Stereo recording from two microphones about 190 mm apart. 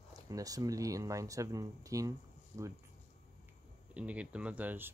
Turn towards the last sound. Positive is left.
turn(degrees=-10)  # may be behind; listen again after turning